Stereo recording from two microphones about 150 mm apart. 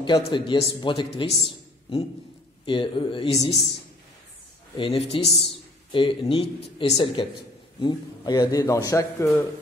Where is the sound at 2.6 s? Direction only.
35° left (ahead or behind).